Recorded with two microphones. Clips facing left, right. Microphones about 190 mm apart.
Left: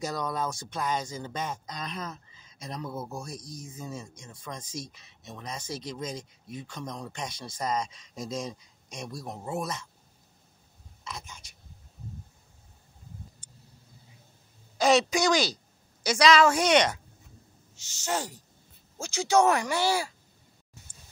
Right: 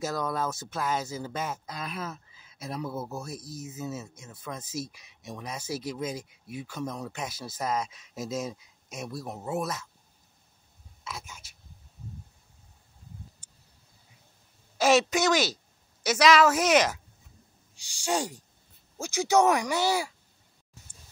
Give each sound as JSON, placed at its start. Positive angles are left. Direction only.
{"t": 0.0, "sound": "speech", "side_deg": -5}
{"t": 11.1, "sound": "speech", "side_deg": -5}
{"t": 14.8, "sound": "a woman's voice", "side_deg": 0}